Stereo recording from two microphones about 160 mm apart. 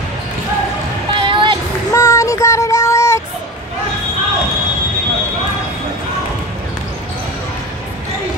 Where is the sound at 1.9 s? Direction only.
15° left (ahead or behind).